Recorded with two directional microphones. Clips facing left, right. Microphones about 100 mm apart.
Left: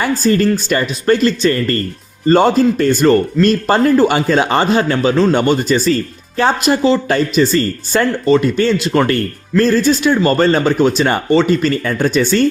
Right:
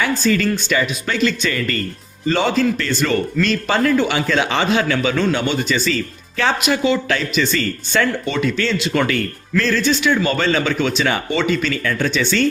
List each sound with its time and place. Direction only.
0.0 s a man's voice: 40° left (ahead or behind)
5.3 s speech: 55° left (ahead or behind)
5.5 s a man's voice: 40° left (ahead or behind)